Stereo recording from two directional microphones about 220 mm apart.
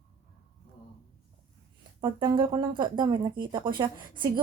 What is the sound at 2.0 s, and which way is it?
A woman's voice, 20° right (ahead or behind).